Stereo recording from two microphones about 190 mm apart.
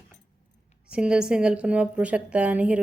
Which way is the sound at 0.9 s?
5° right (ahead or behind).